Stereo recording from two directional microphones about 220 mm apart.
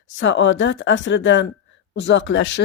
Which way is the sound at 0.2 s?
55° left (ahead or behind).